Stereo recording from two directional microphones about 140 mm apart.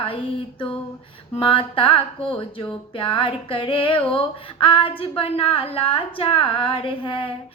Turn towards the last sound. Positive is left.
turn(degrees=40)  # may be behind; listen again after turning